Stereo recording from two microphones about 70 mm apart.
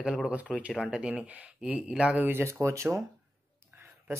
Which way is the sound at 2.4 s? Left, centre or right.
Right.